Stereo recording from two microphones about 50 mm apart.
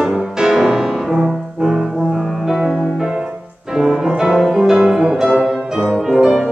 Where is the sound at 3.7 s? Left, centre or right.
Centre.